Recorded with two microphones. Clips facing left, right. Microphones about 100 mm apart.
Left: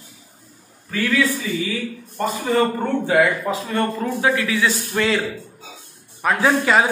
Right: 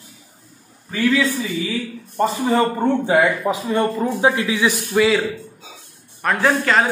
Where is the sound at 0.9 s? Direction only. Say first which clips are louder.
Right 2 dB; 20° right (ahead or behind).